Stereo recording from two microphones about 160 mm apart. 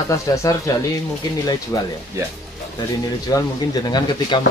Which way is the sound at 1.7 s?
20° left (ahead or behind).